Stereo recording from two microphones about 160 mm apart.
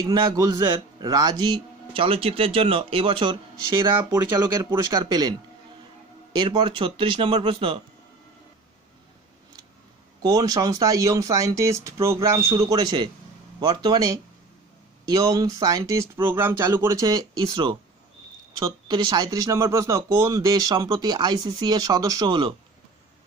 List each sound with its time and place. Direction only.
0.0 s speech: 25° right (ahead or behind)
4.6 s speech: 25° right (ahead or behind)
6.3 s speech: 30° right (ahead or behind)
10.2 s speech: 25° right (ahead or behind)